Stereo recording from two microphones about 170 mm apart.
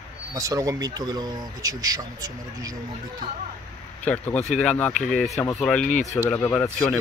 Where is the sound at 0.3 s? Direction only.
20° right (ahead or behind).